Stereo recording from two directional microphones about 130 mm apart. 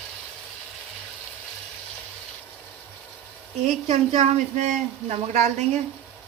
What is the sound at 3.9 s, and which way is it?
Speech, 60° right (ahead or behind).